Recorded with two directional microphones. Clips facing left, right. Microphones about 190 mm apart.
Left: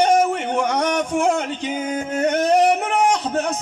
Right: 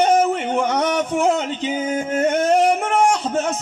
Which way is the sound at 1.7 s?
5° right (ahead or behind).